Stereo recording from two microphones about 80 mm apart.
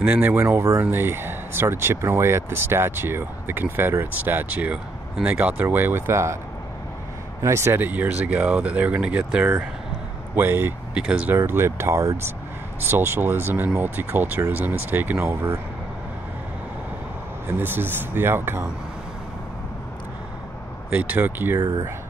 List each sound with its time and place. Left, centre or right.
0.0 s speech: right
7.4 s speech: right
7.8 s speech: right
12.8 s speech: right
17.6 s speech: right
20.9 s speech: right
21.5 s speech: right